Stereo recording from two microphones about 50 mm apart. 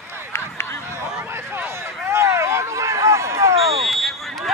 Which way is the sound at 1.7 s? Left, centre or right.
Right.